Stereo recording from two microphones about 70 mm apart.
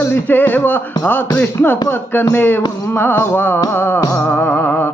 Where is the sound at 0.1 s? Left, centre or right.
Left.